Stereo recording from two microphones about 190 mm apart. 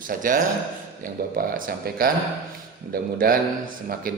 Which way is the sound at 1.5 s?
50° right (ahead or behind).